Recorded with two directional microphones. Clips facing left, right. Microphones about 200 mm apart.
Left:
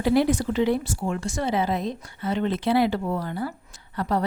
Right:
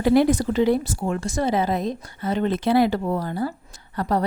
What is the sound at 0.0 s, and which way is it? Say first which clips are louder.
A woman's voice: right 3 dB; 50° right (ahead or behind).